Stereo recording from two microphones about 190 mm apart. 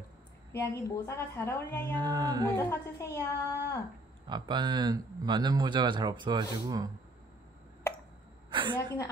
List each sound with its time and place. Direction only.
0.5 s a woman's voice: 15° left (ahead or behind)
2.0 s speech: 20° right (ahead or behind)
2.5 s a woman's voice: 15° left (ahead or behind)
4.3 s speech: 25° right (ahead or behind)
8.5 s a sound: 25° right (ahead or behind)